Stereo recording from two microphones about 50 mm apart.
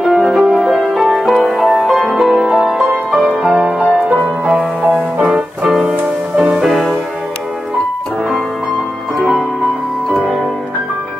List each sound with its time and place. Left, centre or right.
0.1 s music: centre
4.8 s music: centre